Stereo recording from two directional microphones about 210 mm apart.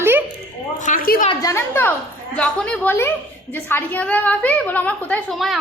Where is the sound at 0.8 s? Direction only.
40° left (ahead or behind).